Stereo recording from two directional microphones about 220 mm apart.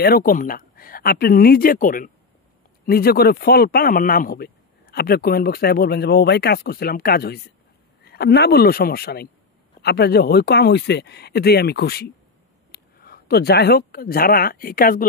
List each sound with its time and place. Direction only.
0.0 s speech: 40° left (ahead or behind)